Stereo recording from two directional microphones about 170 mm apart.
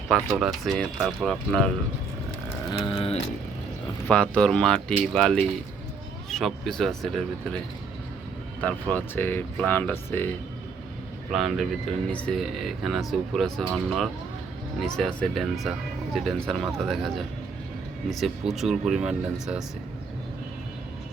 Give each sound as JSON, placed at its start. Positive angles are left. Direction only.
{"t": 0.3, "sound": "speech", "side_deg": -5}
{"t": 2.6, "sound": "a sound", "side_deg": 30}
{"t": 4.0, "sound": "speech", "side_deg": 5}
{"t": 8.6, "sound": "speech", "side_deg": 10}
{"t": 11.3, "sound": "speech", "side_deg": 0}